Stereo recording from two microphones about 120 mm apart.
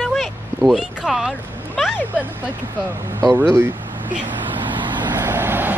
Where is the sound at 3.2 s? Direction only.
20° right (ahead or behind).